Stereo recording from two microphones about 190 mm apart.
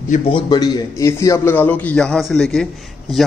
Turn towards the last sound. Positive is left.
turn(degrees=0)  # may be behind; listen again after turning